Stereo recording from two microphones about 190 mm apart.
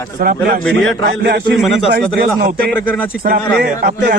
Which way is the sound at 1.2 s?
60° right (ahead or behind).